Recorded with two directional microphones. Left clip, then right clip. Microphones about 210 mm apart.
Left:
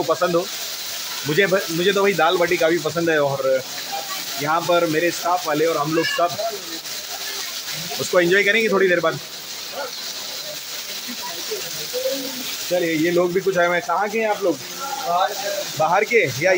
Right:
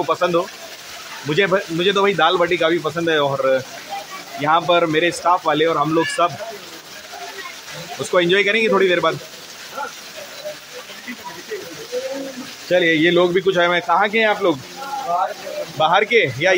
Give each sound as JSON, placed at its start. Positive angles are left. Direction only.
{"t": 0.0, "sound": "speech", "side_deg": -5}
{"t": 8.1, "sound": "speech", "side_deg": -5}
{"t": 12.7, "sound": "speech", "side_deg": -25}
{"t": 15.8, "sound": "speech", "side_deg": -5}